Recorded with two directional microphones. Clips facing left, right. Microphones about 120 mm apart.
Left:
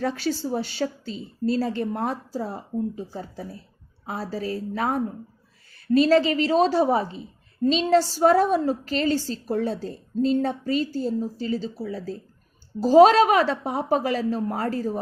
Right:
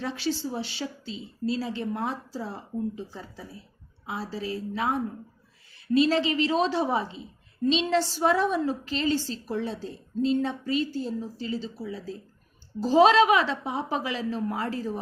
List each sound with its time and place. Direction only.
0.0 s a woman's voice: 45° left (ahead or behind)